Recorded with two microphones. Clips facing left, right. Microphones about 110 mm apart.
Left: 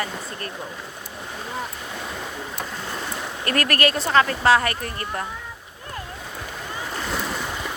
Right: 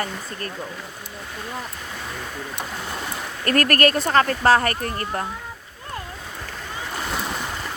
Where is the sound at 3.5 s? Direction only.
45° right (ahead or behind).